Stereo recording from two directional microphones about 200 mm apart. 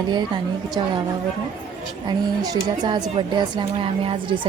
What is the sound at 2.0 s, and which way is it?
Speech, 20° right (ahead or behind).